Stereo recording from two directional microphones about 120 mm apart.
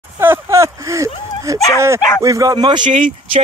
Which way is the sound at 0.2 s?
20° right (ahead or behind).